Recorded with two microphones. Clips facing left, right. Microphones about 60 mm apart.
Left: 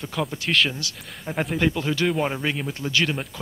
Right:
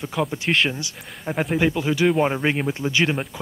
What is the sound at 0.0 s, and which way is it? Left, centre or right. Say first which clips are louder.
Speech: right 3 dB; centre.